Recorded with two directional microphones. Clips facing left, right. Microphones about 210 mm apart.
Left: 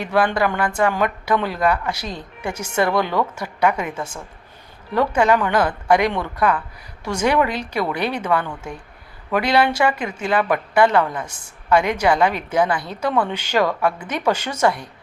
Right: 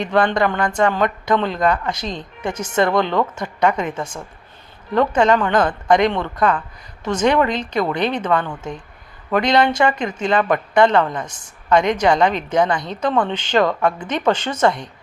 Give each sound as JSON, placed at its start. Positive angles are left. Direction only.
{"t": 0.0, "sound": "a woman's voice", "side_deg": 5}